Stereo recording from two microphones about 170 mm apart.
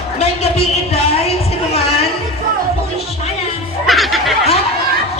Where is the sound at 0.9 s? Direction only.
35° left (ahead or behind).